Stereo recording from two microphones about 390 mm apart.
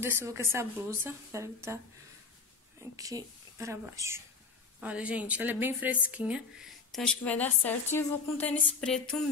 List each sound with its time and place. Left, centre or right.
0.0 s a woman's voice: centre
2.8 s a woman's voice: centre